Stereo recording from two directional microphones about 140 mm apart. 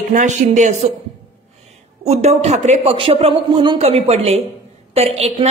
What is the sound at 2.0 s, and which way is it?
A woman's voice, 50° right (ahead or behind).